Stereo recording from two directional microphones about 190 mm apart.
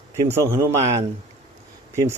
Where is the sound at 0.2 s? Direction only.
15° right (ahead or behind).